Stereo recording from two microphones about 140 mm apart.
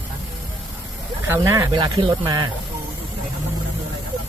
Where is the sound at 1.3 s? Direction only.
25° right (ahead or behind).